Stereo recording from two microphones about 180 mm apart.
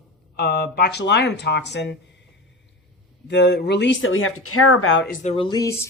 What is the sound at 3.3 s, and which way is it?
Speech, 75° left (ahead or behind).